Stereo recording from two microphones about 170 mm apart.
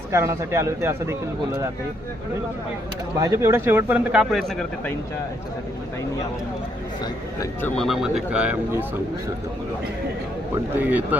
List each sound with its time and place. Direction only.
0.1 s speech: 15° right (ahead or behind)
3.2 s speech: 20° right (ahead or behind); by 4.5 s centre (ahead or behind)
7.6 s speech: centre (ahead or behind)
10.8 s speech: 10° right (ahead or behind)